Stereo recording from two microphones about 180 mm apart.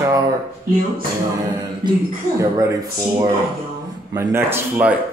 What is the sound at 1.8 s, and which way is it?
Speech, 25° right (ahead or behind).